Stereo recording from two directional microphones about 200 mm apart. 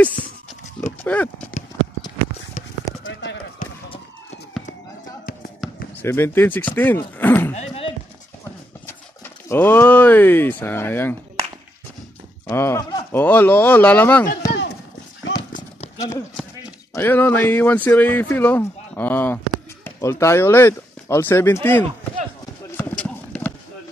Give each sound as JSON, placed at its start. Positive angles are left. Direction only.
{"t": 1.0, "sound": "speech", "side_deg": 5}
{"t": 3.1, "sound": "clip-clop", "side_deg": 65}
{"t": 5.6, "sound": "basketball bounce", "side_deg": 0}
{"t": 6.0, "sound": "speech", "side_deg": 10}
{"t": 7.5, "sound": "speech", "side_deg": 30}
{"t": 8.8, "sound": "speech", "side_deg": 10}
{"t": 12.4, "sound": "speech", "side_deg": 15}
{"t": 16.9, "sound": "speech", "side_deg": 10}
{"t": 22.8, "sound": "clip-clop", "side_deg": 5}